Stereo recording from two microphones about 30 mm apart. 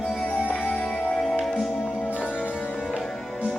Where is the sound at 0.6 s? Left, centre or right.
Left.